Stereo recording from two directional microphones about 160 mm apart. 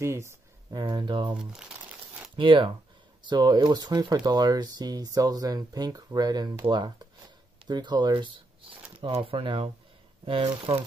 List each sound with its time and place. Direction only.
0.0 s speech: 15° right (ahead or behind)
1.3 s crumpling: 5° right (ahead or behind)
2.3 s speech: 30° right (ahead or behind)